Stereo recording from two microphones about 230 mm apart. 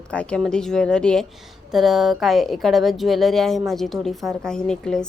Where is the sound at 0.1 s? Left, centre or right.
Centre.